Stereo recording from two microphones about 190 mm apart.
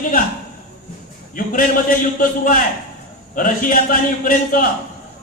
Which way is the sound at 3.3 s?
45° left (ahead or behind).